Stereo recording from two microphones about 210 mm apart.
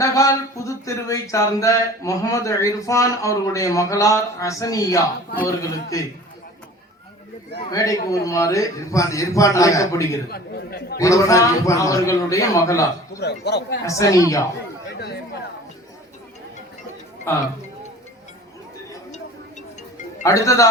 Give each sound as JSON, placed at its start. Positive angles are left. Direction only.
{"t": 0.0, "sound": "speech", "side_deg": 15}
{"t": 7.6, "sound": "speech", "side_deg": 15}
{"t": 10.2, "sound": "a man's voice", "side_deg": 50}
{"t": 10.9, "sound": "speech", "side_deg": 15}
{"t": 13.1, "sound": "a man's voice", "side_deg": 50}
{"t": 13.8, "sound": "speech", "side_deg": 15}
{"t": 17.3, "sound": "speech", "side_deg": 10}
{"t": 20.2, "sound": "speech", "side_deg": 15}